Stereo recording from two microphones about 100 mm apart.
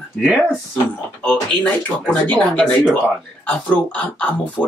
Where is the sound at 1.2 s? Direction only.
15° left (ahead or behind).